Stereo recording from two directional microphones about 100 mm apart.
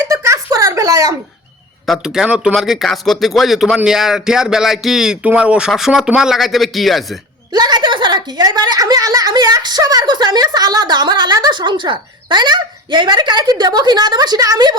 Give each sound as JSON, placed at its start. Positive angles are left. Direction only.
{"t": 0.0, "sound": "a sound", "side_deg": -30}
{"t": 1.9, "sound": "speech", "side_deg": -5}
{"t": 7.5, "sound": "a woman's voice", "side_deg": -45}